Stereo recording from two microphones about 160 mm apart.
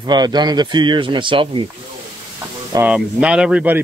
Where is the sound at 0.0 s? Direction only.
25° right (ahead or behind).